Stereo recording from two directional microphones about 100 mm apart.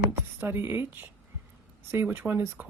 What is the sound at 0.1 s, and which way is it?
Speech, 20° right (ahead or behind).